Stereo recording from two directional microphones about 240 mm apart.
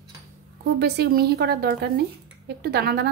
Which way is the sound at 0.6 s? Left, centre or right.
Right.